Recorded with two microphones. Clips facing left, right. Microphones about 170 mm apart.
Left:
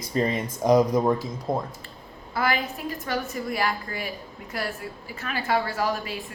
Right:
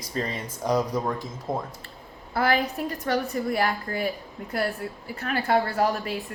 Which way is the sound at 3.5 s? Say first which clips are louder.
Even; 50° right (ahead or behind).